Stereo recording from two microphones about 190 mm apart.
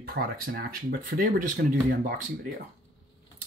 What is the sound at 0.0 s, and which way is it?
Speech, 55° right (ahead or behind).